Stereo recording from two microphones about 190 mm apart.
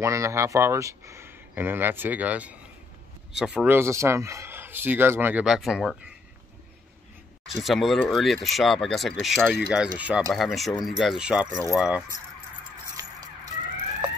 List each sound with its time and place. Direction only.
0.0 s speech: 15° right (ahead or behind)
7.4 s speech: centre (ahead or behind)
13.0 s music: 15° right (ahead or behind)